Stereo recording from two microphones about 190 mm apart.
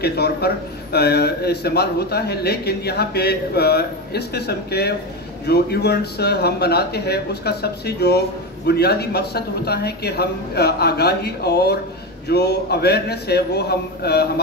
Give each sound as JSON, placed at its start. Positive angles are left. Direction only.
{"t": 0.0, "sound": "a man's voice", "side_deg": 60}